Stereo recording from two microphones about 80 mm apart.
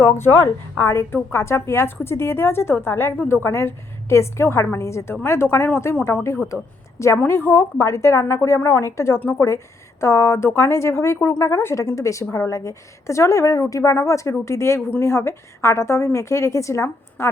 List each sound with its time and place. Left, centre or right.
0.0 s a woman's voice: left
7.3 s a woman's voice: left